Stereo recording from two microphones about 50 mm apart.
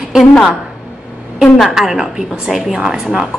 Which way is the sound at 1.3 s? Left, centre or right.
Centre.